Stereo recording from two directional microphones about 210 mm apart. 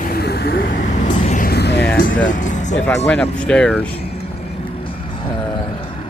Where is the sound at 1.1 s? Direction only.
30° left (ahead or behind); by 1.9 s 50° left (ahead or behind).